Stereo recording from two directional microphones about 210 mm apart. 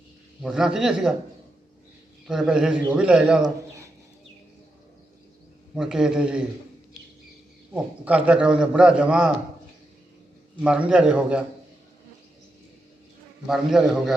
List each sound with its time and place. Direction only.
0.4 s a man's voice: 5° right (ahead or behind)
2.2 s a man's voice: centre (ahead or behind)
5.7 s a man's voice: 5° right (ahead or behind)
7.7 s a man's voice: 5° right (ahead or behind)
10.6 s a man's voice: 5° right (ahead or behind)
13.5 s a man's voice: centre (ahead or behind)